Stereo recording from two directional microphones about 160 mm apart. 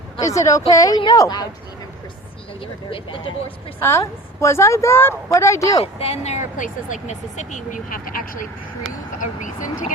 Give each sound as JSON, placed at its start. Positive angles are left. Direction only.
{"t": 0.2, "sound": "speech", "side_deg": 20}
{"t": 2.9, "sound": "speech", "side_deg": 30}
{"t": 3.8, "sound": "speech", "side_deg": 15}
{"t": 5.8, "sound": "speech", "side_deg": 40}